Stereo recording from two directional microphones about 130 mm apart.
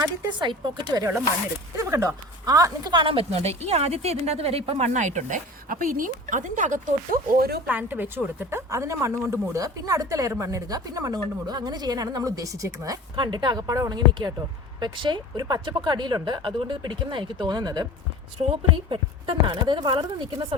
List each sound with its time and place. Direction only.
0.0 s speech: 35° right (ahead or behind)
1.7 s speech: 25° right (ahead or behind); by 7.2 s 85° right
7.7 s a woman's voice: 15° right (ahead or behind); by 20.6 s 40° right (ahead or behind)